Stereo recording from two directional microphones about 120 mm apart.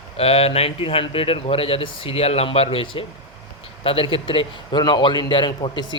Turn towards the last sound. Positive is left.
turn(degrees=40)  # may be behind; listen again after turning